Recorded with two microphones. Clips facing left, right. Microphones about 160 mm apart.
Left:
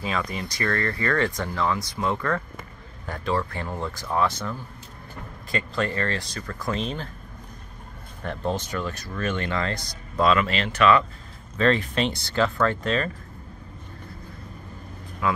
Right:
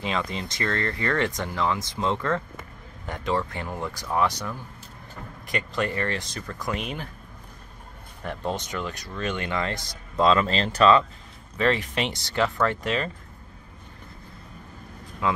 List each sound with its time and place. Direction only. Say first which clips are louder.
0.0 s a man's voice: even; 25° right (ahead or behind)
8.5 s a man's voice: left 2 dB; 20° right (ahead or behind)
11.5 s speech: left 2 dB; 15° right (ahead or behind)
15.2 s speech: even; 25° right (ahead or behind)